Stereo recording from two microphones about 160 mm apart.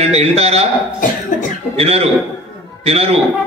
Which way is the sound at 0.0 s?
40° right (ahead or behind).